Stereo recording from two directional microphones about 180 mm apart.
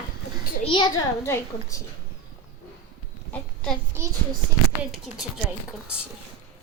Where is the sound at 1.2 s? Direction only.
15° left (ahead or behind).